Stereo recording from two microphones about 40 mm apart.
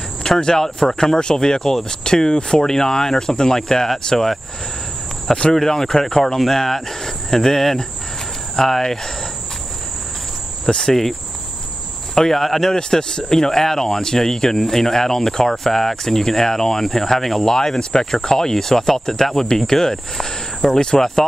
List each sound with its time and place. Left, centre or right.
0.4 s speech: centre
5.5 s speech: centre
10.7 s speech: centre
12.2 s speech: centre
12.7 s speech: centre